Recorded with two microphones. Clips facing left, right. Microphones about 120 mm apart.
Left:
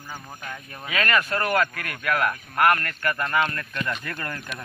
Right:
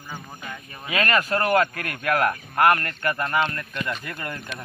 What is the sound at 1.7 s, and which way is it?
Speech, 35° right (ahead or behind).